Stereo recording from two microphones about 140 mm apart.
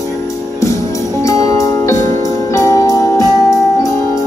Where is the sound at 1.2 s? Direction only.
20° left (ahead or behind).